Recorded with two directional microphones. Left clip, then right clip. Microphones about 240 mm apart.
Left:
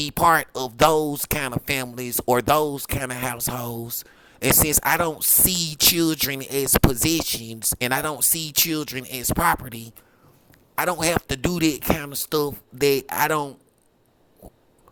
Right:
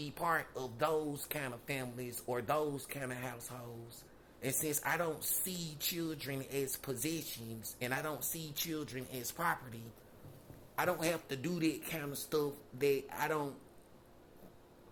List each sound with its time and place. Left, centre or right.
0.0 s speech: left